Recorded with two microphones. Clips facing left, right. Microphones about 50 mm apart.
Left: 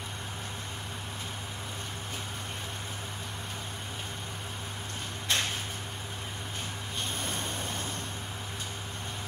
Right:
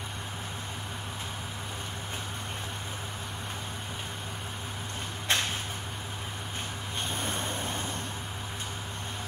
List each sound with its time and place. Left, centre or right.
5.3 s a sound: right
7.2 s spray: centre
7.5 s vehicle: centre